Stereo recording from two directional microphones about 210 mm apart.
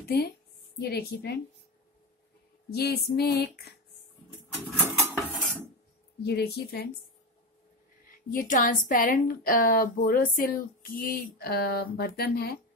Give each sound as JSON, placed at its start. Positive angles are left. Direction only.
{"t": 0.7, "sound": "speech", "side_deg": 50}
{"t": 2.7, "sound": "speech", "side_deg": 50}
{"t": 4.7, "sound": "dishes", "side_deg": -10}
{"t": 6.2, "sound": "speech", "side_deg": 50}
{"t": 8.3, "sound": "a woman's voice", "side_deg": 40}